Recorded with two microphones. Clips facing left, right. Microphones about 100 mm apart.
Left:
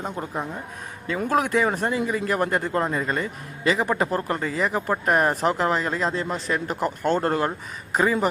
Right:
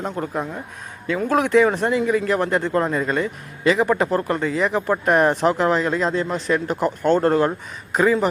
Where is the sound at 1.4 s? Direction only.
40° left (ahead or behind).